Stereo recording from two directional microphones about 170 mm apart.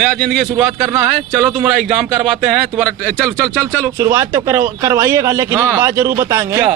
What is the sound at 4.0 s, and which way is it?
A man's voice, 20° right (ahead or behind).